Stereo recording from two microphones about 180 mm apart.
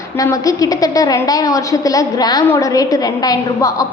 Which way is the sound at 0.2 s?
20° left (ahead or behind).